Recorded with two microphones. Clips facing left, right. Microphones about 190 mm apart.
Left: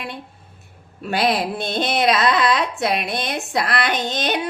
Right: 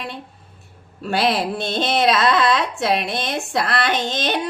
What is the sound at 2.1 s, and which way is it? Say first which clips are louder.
Child singing: right 1 dB; 15° left (ahead or behind).